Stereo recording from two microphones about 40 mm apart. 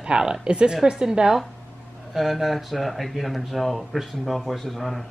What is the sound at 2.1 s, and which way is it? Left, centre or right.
Speech, centre.